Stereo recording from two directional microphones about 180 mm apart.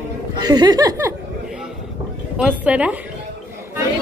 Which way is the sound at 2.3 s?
5° right (ahead or behind).